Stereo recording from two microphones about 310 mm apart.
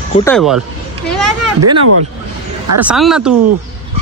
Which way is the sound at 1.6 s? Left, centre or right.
Right.